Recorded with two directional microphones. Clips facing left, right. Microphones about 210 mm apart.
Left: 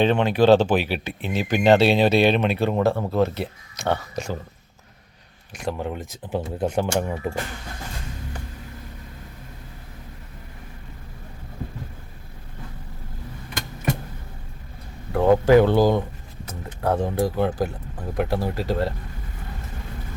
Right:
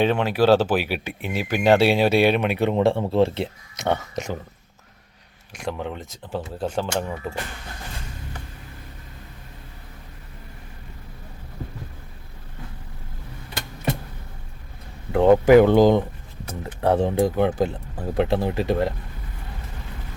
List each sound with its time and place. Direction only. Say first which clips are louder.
0.0 s speech: left 1 dB; 5° right (ahead or behind)
5.6 s speech: left 1 dB; 5° left (ahead or behind)
6.2 s speech: left 3 dB; 20° left (ahead or behind)
15.1 s speech: right 2 dB; 20° right (ahead or behind)
17.2 s speech: right 2 dB; 20° right (ahead or behind)